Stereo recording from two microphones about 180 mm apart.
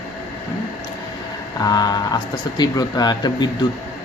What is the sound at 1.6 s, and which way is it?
Speech, 20° left (ahead or behind).